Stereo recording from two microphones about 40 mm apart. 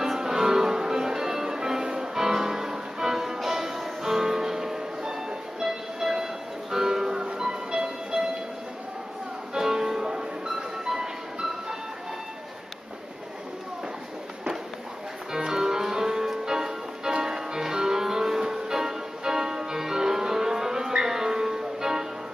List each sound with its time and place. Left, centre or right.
0.0 s music: centre
5.6 s train: centre
6.7 s music: centre
9.5 s music: centre
15.3 s music: centre